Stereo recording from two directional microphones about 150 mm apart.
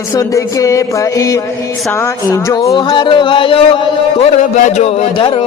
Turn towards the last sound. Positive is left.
turn(degrees=45)  # may be behind; listen again after turning